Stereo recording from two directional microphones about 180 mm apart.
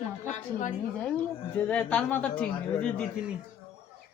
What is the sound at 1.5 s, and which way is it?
A man's voice, 10° left (ahead or behind).